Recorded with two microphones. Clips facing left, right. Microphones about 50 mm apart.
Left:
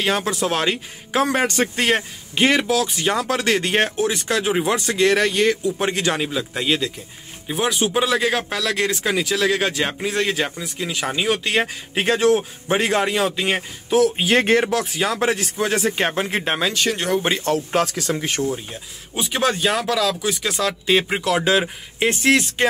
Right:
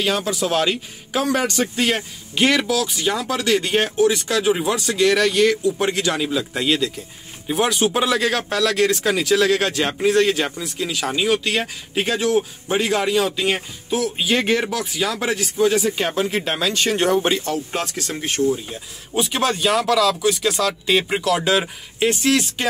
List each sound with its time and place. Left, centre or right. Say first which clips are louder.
0.0 s speech: even; left
2.3 s speech: left 1 dB; left
6.3 s speech: right 1 dB; centre
7.4 s speech: right 2 dB; centre; by 13.6 s left
13.8 s speech: left 4 dB; left
16.7 s speech: right 3 dB; centre
18.4 s speech: right 7 dB; centre
19.1 s speech: right 1 dB; centre
21.2 s speech: even; left